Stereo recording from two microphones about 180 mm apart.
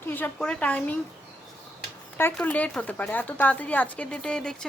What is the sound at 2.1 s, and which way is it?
A woman's voice, 10° left (ahead or behind).